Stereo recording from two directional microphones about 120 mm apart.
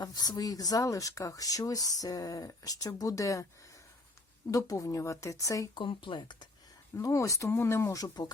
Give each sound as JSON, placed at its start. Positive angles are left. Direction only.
{"t": 0.0, "sound": "speech", "side_deg": 35}
{"t": 4.5, "sound": "speech", "side_deg": 25}
{"t": 5.8, "sound": "speech", "side_deg": 45}
{"t": 6.9, "sound": "speech", "side_deg": 25}